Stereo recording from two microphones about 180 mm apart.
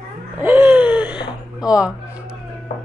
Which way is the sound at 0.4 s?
10° right (ahead or behind).